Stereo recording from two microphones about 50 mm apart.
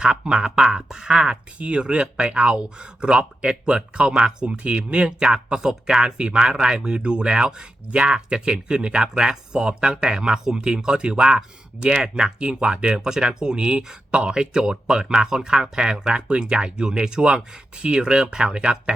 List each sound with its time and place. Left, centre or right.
0.0 s speech: centre
1.5 s speech: right